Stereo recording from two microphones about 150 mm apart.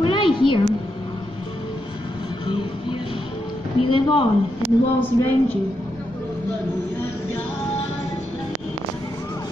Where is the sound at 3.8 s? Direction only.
35° left (ahead or behind).